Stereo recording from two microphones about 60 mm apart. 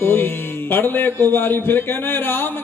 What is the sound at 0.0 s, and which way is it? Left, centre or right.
A man's voice, left.